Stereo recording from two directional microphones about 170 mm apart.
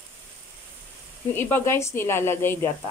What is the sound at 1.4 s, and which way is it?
Speech, 15° left (ahead or behind).